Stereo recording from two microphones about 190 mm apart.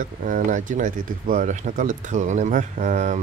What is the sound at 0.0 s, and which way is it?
Speech, 45° right (ahead or behind).